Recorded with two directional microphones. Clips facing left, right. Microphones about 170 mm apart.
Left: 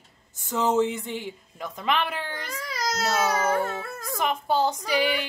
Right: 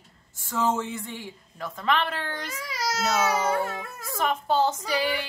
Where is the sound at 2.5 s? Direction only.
10° right (ahead or behind).